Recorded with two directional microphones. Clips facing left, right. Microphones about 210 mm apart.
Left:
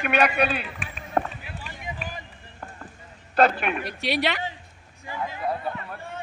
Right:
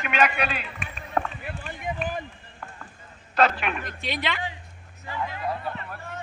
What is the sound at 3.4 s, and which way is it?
Speech, 55° left (ahead or behind).